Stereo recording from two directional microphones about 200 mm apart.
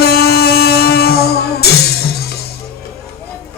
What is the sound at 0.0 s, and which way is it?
Music, 50° left (ahead or behind).